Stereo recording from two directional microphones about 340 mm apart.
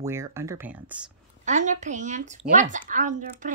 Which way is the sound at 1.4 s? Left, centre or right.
Right.